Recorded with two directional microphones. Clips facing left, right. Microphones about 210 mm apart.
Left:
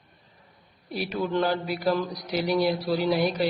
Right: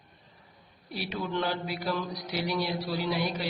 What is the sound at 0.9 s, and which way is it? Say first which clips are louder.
A man's voice: left 6 dB; 50° left (ahead or behind).